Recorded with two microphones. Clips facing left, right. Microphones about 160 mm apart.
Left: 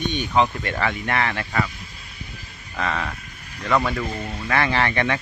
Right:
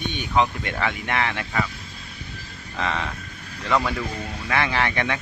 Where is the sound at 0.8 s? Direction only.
15° right (ahead or behind).